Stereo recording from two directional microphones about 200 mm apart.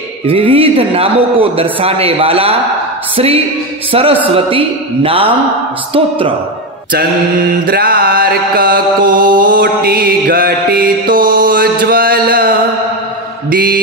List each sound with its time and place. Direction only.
0.3 s a man's voice: 25° right (ahead or behind)
3.9 s a man's voice: 25° right (ahead or behind)
7.6 s mantra: 45° right (ahead or behind)